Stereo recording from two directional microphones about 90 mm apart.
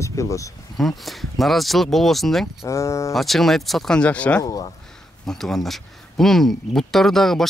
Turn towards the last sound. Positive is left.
turn(degrees=5)  # may be behind; listen again after turning